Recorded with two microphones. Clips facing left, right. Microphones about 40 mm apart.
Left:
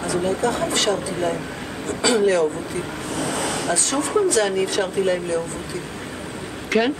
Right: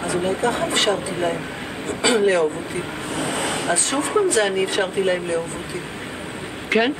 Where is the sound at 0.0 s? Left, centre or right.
Right.